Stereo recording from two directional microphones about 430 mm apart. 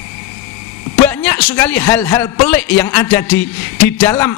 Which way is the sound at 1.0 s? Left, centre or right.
Centre.